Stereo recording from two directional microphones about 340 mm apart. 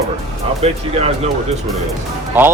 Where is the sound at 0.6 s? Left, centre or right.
Centre.